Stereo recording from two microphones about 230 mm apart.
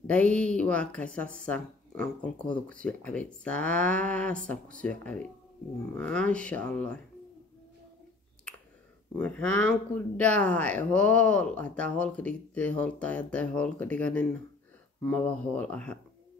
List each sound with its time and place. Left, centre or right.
0.0 s speech: centre
9.1 s speech: centre